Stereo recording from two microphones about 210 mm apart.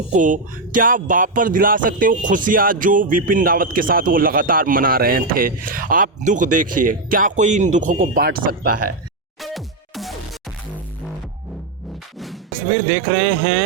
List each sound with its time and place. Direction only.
0.1 s speech: 40° right (ahead or behind)
9.4 s music: centre (ahead or behind)
12.9 s speech: 55° right (ahead or behind)